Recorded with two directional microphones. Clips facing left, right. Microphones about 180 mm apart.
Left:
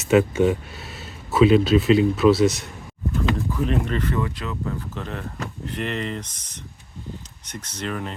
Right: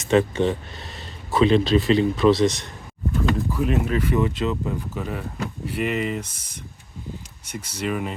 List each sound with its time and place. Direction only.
0.0 s speech: 10° left (ahead or behind)
3.5 s speech: 5° right (ahead or behind)
4.2 s speech: 20° right (ahead or behind)
4.9 s speech: 10° right (ahead or behind)